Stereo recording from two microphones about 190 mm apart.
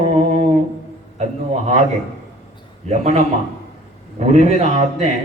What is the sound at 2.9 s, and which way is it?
Mantra, 35° right (ahead or behind).